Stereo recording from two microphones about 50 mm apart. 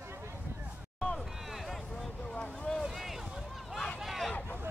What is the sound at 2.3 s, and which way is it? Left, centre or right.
Boat, left.